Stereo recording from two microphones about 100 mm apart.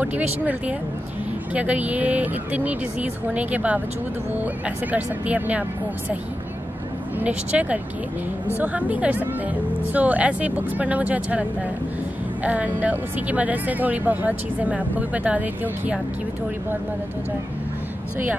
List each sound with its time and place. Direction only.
0.0 s speech: 15° right (ahead or behind)
7.2 s speech: 15° right (ahead or behind)
12.4 s speech: 15° right (ahead or behind)